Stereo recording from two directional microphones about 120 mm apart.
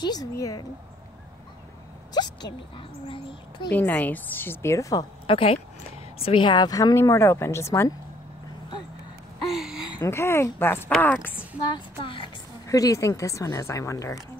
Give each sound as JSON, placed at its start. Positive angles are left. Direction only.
{"t": 0.0, "sound": "speech", "side_deg": 30}
{"t": 2.2, "sound": "a sound", "side_deg": 35}
{"t": 3.1, "sound": "speech", "side_deg": 45}
{"t": 3.7, "sound": "a woman's voice", "side_deg": 15}
{"t": 5.2, "sound": "speech", "side_deg": 50}
{"t": 9.6, "sound": "a sound", "side_deg": -5}
{"t": 9.9, "sound": "a woman's voice", "side_deg": 25}
{"t": 12.0, "sound": "a sound", "side_deg": 45}
{"t": 12.6, "sound": "speech", "side_deg": 30}